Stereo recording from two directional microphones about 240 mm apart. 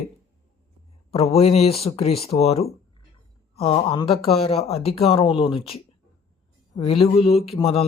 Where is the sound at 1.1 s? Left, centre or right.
Left.